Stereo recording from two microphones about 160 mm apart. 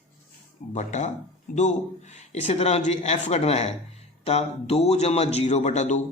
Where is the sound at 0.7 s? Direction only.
45° left (ahead or behind).